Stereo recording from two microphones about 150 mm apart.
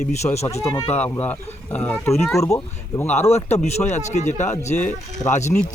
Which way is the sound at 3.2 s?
45° left (ahead or behind).